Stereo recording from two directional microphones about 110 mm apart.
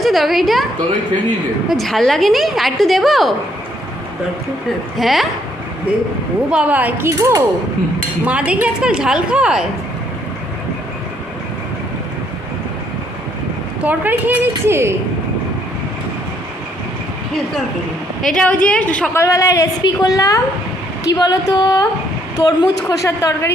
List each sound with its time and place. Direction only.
0.0 s a woman's voice: centre (ahead or behind)
1.7 s a woman's voice: centre (ahead or behind)
4.9 s a woman's voice: centre (ahead or behind)
6.5 s a woman's voice: 10° right (ahead or behind)
7.2 s speech: 30° right (ahead or behind)
8.2 s a woman's voice: 10° right (ahead or behind)
13.8 s a woman's voice: 15° right (ahead or behind)
18.2 s a woman's voice: 5° left (ahead or behind)
19.1 s a woman's voice: 25° left (ahead or behind)